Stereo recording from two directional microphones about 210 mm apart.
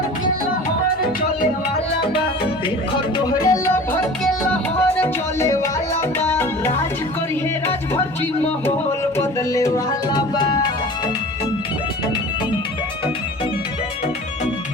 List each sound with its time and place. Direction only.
3.2 s music: 20° left (ahead or behind)
4.8 s music: 10° left (ahead or behind)
9.1 s music: 15° left (ahead or behind)